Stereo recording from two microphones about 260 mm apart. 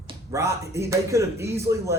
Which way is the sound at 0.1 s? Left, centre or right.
Centre.